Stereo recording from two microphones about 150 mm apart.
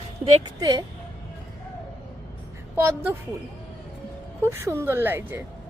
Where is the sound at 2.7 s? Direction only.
10° right (ahead or behind).